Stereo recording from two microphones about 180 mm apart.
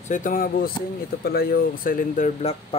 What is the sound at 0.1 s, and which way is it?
Speech, 50° left (ahead or behind).